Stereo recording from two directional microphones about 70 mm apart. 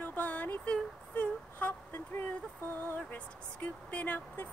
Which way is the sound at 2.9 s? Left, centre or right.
Left.